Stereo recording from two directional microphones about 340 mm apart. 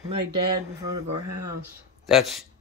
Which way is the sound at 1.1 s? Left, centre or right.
Right.